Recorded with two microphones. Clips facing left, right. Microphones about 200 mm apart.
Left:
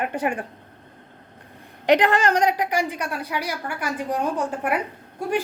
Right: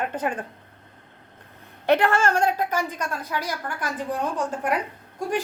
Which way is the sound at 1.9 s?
15° left (ahead or behind).